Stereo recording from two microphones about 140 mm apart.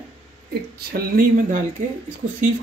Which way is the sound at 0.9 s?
90° right.